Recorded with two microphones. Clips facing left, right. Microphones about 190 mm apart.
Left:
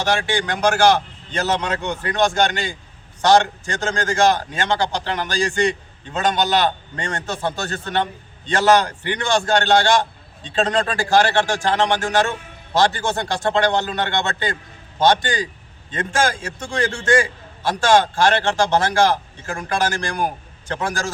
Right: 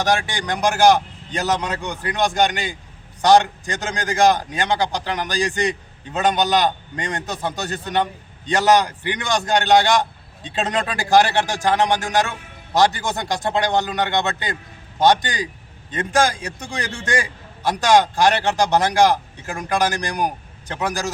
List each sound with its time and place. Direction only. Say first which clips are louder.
0.3 s a man's voice: left 1 dB; 15° right (ahead or behind)